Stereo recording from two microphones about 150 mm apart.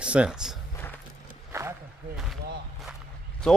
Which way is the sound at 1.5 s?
15° right (ahead or behind).